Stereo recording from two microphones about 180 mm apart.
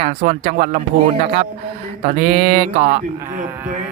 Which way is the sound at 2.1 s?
55° right (ahead or behind).